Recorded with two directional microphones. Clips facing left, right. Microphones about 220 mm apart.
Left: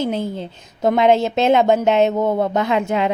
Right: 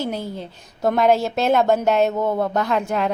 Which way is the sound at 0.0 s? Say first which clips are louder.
Left 4 dB; 20° left (ahead or behind).